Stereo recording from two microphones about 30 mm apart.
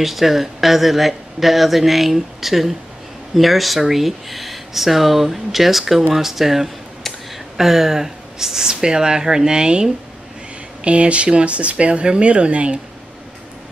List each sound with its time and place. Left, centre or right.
0.0 s speech: centre; by 9.8 s right
10.8 s speech: right